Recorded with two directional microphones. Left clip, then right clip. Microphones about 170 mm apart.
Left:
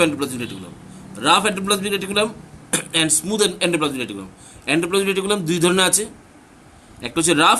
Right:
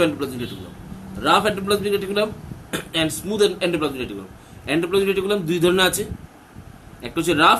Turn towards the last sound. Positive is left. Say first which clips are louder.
# left 1 dB
turn(degrees=55)  # may be behind; listen again after turning